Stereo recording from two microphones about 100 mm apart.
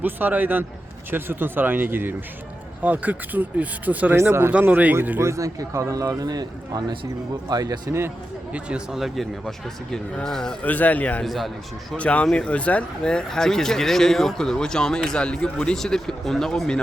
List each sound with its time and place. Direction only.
0.0 s speech: 20° right (ahead or behind)
5.2 s a man's voice: 30° right (ahead or behind)
8.5 s a man's voice: 5° right (ahead or behind)
10.6 s speech: 15° left (ahead or behind)
11.2 s a man's voice: centre (ahead or behind)
11.9 s speech: 15° left (ahead or behind)